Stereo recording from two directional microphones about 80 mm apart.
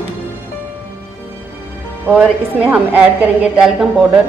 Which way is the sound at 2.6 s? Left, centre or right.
Centre.